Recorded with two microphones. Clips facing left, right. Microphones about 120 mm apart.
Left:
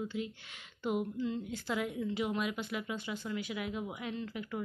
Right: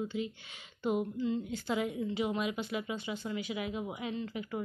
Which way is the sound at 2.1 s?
5° right (ahead or behind).